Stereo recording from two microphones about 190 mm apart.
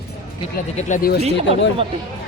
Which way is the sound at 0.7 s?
45° left (ahead or behind).